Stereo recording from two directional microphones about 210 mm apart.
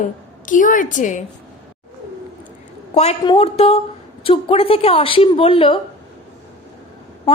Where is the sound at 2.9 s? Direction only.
30° left (ahead or behind).